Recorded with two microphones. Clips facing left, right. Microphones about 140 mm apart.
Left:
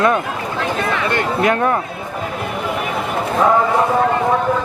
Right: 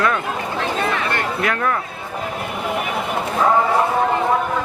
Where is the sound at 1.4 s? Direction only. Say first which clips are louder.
Left 6 dB; 30° left (ahead or behind).